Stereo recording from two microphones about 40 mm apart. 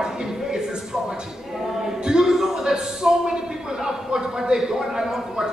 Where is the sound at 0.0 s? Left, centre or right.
Centre.